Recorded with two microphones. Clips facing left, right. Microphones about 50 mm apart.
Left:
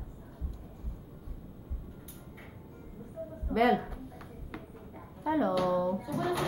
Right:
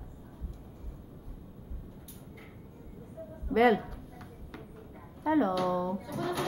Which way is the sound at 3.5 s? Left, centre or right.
Centre.